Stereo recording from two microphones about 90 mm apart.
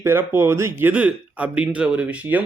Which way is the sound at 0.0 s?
25° right (ahead or behind).